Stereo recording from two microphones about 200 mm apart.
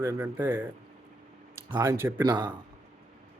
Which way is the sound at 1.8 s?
10° right (ahead or behind).